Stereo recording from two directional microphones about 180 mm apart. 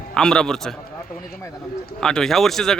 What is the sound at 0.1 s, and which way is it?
Speech, 5° left (ahead or behind).